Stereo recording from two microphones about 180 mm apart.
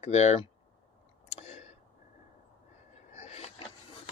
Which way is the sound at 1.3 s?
35° left (ahead or behind).